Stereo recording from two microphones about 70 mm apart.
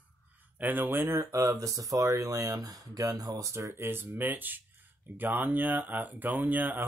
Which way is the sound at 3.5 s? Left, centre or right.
Right.